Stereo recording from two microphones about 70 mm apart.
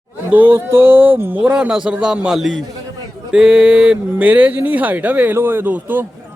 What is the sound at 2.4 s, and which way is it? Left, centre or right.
A man's voice, centre.